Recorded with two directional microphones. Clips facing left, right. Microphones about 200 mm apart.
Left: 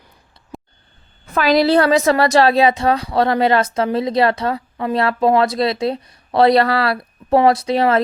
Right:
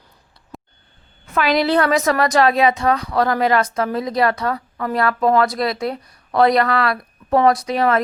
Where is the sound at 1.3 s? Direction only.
35° left (ahead or behind).